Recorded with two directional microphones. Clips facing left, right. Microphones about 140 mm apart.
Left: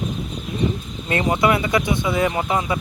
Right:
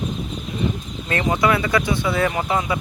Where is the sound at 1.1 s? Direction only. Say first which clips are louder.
Left 1 dB; 25° left (ahead or behind).